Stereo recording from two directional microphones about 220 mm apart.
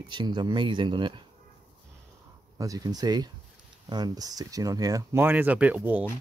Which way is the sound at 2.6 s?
15° right (ahead or behind).